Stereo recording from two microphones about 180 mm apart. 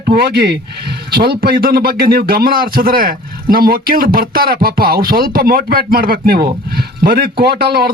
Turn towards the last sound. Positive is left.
turn(degrees=-60)  # may be behind; listen again after turning